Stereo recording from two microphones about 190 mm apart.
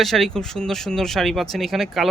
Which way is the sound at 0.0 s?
Centre (ahead or behind).